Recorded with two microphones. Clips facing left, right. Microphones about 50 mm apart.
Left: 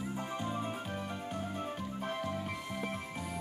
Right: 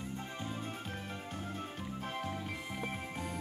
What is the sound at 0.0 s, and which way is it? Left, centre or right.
Music, centre.